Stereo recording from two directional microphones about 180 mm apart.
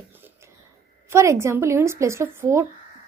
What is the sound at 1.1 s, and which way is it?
A woman's voice, 15° right (ahead or behind).